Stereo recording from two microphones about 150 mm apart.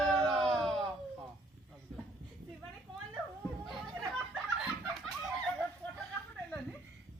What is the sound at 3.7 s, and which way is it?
Snicker, centre (ahead or behind).